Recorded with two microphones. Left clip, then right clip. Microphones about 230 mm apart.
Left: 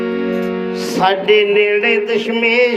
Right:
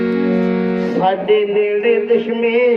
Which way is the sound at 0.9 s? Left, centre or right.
Left.